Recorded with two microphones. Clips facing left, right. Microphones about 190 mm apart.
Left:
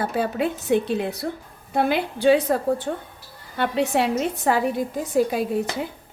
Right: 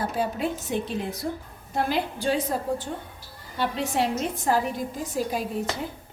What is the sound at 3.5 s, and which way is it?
A woman's voice, 60° left (ahead or behind).